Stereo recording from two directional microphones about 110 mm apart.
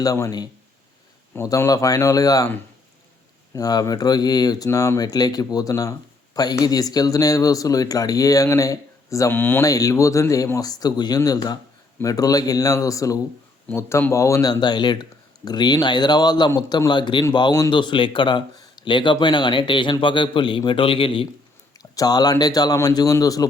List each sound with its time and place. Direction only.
0.0 s speech: 35° left (ahead or behind)
3.5 s speech: 35° left (ahead or behind)
9.3 s speech: 20° left (ahead or behind)
9.6 s speech: 30° left (ahead or behind)
13.7 s speech: 15° left (ahead or behind)
14.1 s speech: 25° left (ahead or behind); by 21.2 s 55° left (ahead or behind)
21.9 s speech: 35° left (ahead or behind)